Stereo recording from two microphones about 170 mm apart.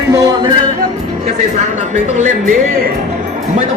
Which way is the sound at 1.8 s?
45° right (ahead or behind).